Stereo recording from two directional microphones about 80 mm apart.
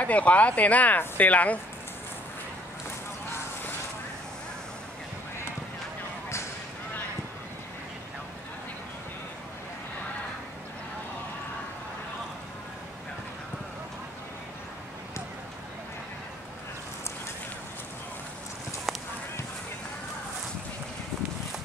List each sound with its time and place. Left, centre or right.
0.0 s speech: centre
18.9 s honk: centre